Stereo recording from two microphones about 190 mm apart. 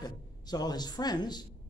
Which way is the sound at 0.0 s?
20° left (ahead or behind).